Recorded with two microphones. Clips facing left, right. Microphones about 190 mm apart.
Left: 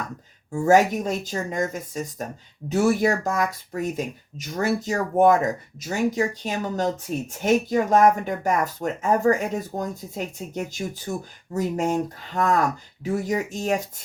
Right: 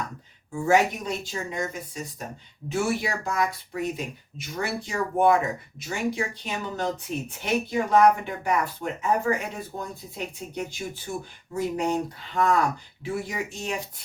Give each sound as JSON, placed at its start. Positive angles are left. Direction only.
{"t": 0.5, "sound": "speech", "side_deg": 45}